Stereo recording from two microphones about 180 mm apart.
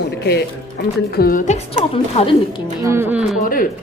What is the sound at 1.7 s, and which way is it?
Speech, 30° left (ahead or behind).